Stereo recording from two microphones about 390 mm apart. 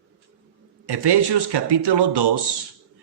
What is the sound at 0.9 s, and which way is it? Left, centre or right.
Speech, right.